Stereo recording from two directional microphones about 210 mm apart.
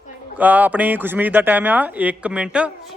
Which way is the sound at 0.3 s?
10° right (ahead or behind).